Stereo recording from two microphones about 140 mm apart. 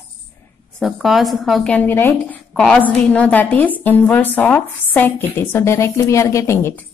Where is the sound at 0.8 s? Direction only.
Centre (ahead or behind).